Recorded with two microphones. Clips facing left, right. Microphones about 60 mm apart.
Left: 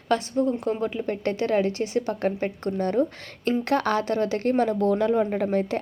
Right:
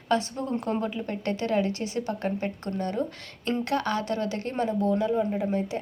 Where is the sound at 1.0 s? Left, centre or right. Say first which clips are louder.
Left 3 dB; left.